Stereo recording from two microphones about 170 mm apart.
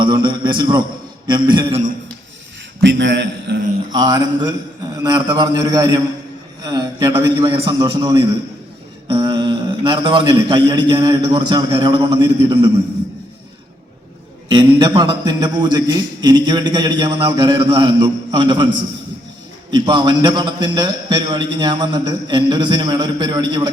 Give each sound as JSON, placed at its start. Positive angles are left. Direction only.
{"t": 0.0, "sound": "a man's voice", "side_deg": -30}
{"t": 2.8, "sound": "a man's voice", "side_deg": -90}
{"t": 3.9, "sound": "a man's voice", "side_deg": -25}
{"t": 14.5, "sound": "a man's voice", "side_deg": -25}
{"t": 19.7, "sound": "a man's voice", "side_deg": -25}